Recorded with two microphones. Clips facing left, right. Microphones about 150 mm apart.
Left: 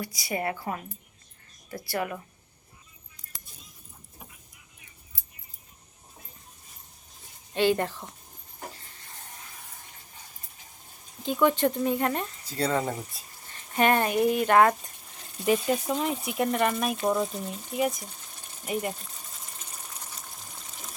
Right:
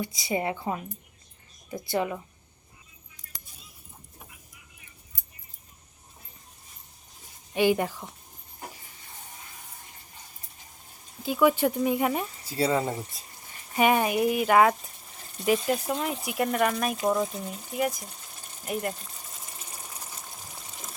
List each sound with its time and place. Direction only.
0.0 s a woman's voice: 20° right (ahead or behind)
7.5 s speech: 15° right (ahead or behind)
11.2 s speech: 5° right (ahead or behind)
17.1 s sewing machine: centre (ahead or behind)